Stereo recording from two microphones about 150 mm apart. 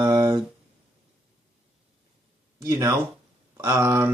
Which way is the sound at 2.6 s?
20° right (ahead or behind).